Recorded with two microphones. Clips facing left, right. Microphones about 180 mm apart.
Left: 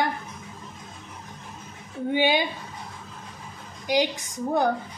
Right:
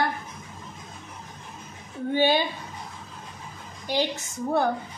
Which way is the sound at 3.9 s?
15° left (ahead or behind).